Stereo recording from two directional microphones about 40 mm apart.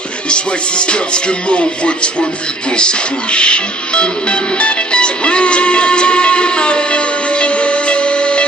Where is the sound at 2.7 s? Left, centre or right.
Left.